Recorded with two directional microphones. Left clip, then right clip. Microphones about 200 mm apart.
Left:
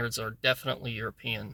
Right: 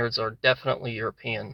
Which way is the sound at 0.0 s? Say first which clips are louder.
Right 6 dB; 20° left (ahead or behind).